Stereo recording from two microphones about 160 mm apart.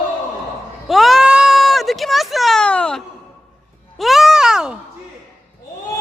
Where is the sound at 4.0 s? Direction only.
Centre (ahead or behind).